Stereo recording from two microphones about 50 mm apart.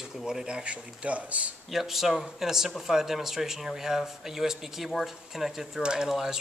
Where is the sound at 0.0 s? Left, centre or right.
Centre.